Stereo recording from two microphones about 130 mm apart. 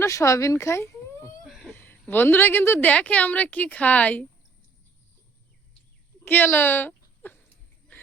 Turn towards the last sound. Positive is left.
turn(degrees=15)  # may be behind; listen again after turning